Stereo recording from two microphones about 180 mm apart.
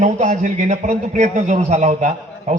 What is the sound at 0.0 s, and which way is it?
A man's voice, 45° right (ahead or behind).